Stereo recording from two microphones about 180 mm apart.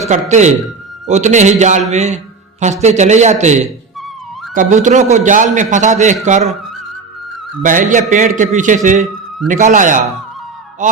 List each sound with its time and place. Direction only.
0.1 s a man's voice: 40° right (ahead or behind)
7.6 s a man's voice: 45° right (ahead or behind)